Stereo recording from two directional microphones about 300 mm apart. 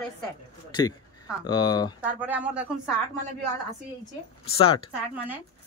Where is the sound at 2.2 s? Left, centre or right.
Centre.